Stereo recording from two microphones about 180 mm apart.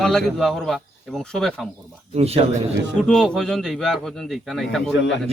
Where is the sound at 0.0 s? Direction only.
Centre (ahead or behind).